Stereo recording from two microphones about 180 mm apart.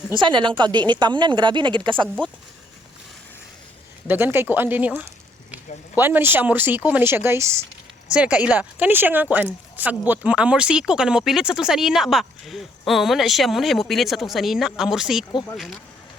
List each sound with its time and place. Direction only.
0.2 s a woman's voice: 25° right (ahead or behind)
4.0 s speech: 10° right (ahead or behind)